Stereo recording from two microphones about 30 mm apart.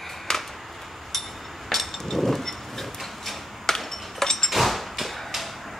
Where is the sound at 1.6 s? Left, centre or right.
Centre.